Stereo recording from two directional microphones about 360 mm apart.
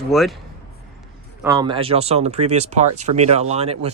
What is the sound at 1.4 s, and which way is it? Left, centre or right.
Speech, centre.